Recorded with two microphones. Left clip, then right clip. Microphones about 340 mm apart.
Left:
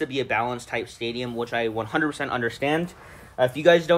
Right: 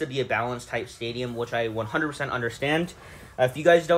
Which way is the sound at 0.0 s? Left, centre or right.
Left.